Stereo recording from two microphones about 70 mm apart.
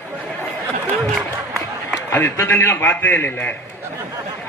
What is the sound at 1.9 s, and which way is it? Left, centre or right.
Speech, left.